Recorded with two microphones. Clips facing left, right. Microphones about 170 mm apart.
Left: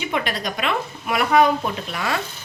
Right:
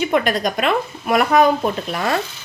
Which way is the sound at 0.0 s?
45° right (ahead or behind).